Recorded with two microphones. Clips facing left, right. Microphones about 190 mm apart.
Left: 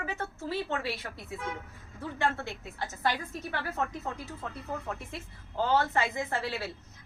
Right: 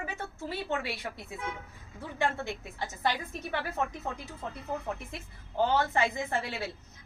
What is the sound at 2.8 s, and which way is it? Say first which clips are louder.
Speech: even; 15° right (ahead or behind).